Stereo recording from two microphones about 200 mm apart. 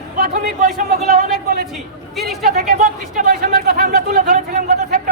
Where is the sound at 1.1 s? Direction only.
45° right (ahead or behind).